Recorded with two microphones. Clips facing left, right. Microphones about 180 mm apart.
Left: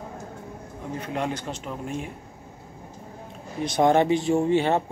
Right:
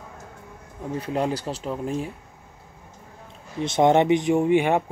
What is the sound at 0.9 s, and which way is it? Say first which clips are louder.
Speech: right 4 dB; 35° right (ahead or behind).